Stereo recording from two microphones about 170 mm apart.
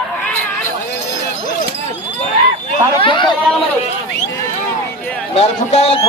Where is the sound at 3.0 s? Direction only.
30° left (ahead or behind).